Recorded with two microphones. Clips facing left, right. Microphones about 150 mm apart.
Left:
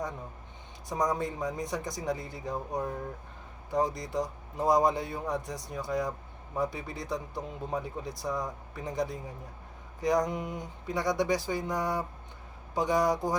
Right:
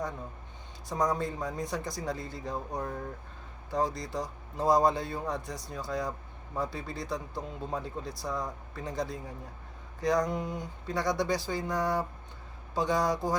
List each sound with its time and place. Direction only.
0.9 s speech: 15° left (ahead or behind)
3.7 s speech: 15° left (ahead or behind)